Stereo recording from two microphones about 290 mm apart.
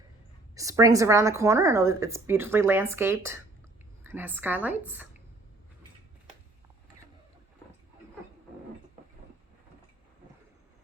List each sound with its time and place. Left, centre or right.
0.5 s a woman's voice: centre